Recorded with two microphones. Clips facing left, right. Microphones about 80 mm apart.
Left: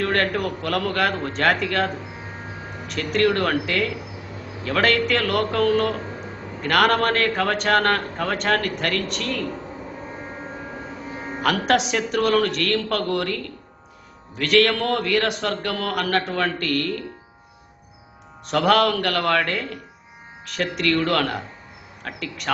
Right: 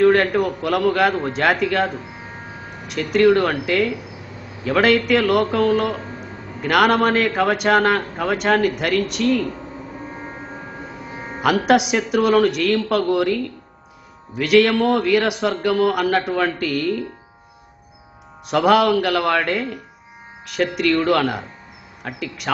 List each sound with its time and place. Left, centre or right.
0.0 s a man's voice: centre
11.4 s a man's voice: centre
18.4 s a man's voice: centre